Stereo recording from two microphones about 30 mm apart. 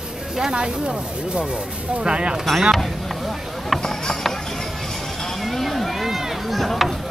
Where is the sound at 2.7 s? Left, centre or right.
Centre.